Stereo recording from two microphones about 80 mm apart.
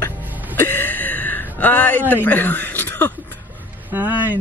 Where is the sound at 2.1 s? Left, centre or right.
Left.